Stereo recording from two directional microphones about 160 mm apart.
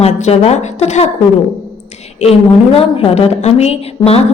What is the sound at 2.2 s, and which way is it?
A woman's voice, 40° left (ahead or behind).